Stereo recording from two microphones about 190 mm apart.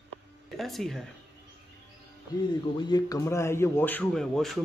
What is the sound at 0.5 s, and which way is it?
Speech, centre (ahead or behind).